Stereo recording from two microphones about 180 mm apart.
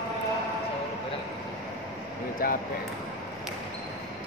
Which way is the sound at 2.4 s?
55° left (ahead or behind).